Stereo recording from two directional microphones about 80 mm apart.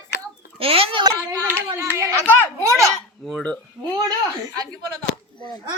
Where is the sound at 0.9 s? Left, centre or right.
Right.